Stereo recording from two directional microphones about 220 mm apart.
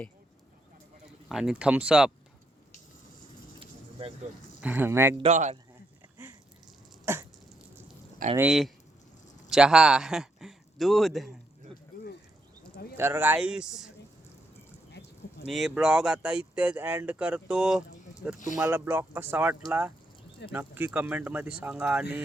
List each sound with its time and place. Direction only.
1.3 s speech: centre (ahead or behind)
3.6 s a sound: 25° right (ahead or behind)
4.6 s speech: 10° right (ahead or behind)
5.1 s speech: 30° right (ahead or behind)
7.0 s a sound: 10° right (ahead or behind)
8.4 s speech: centre (ahead or behind)
13.0 s speech: 10° right (ahead or behind)
15.4 s speech: centre (ahead or behind)